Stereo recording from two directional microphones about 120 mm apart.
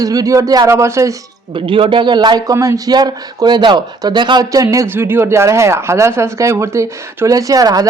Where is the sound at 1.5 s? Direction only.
45° right (ahead or behind).